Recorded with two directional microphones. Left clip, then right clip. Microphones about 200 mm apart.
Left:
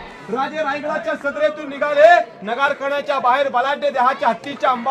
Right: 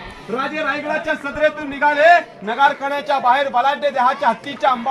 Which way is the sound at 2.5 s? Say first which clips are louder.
Right 3 dB; 10° left (ahead or behind).